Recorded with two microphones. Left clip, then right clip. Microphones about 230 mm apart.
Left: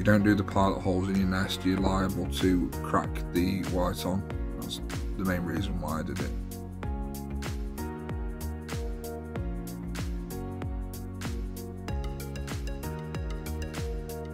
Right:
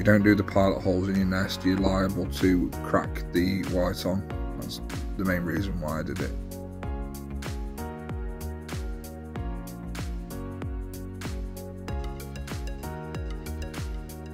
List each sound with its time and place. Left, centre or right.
0.0 s speech: centre